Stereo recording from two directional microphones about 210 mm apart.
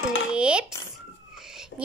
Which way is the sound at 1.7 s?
60° left (ahead or behind).